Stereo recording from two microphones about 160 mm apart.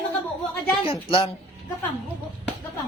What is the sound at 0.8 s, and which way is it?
Speech, 35° left (ahead or behind).